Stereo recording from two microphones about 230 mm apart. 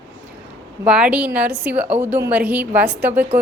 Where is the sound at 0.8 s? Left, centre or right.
Centre.